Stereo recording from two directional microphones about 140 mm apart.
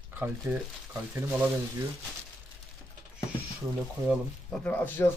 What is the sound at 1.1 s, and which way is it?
Speech, 20° right (ahead or behind).